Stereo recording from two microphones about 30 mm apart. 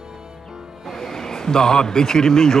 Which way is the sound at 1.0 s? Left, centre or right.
Centre.